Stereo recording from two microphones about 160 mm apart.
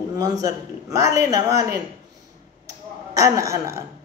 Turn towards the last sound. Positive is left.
turn(degrees=-20)  # may be behind; listen again after turning